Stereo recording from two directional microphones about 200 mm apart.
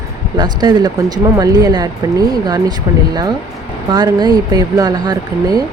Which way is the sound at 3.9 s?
20° right (ahead or behind).